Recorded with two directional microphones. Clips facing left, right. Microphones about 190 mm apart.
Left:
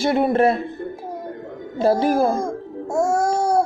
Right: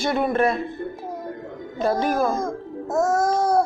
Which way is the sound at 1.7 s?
30° left (ahead or behind).